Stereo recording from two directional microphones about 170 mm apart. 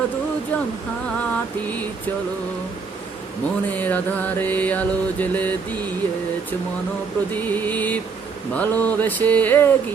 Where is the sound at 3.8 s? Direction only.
10° left (ahead or behind).